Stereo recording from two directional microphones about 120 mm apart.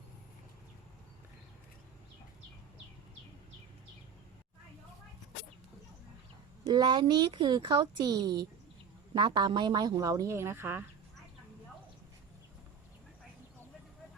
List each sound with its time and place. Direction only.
6.7 s speech: 35° right (ahead or behind); by 10.8 s 20° right (ahead or behind)